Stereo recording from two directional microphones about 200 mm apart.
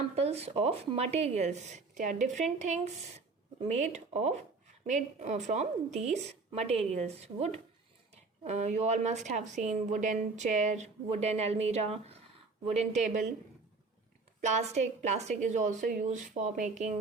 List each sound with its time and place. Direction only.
0.2 s speech: 30° right (ahead or behind)
14.4 s speech: 35° right (ahead or behind)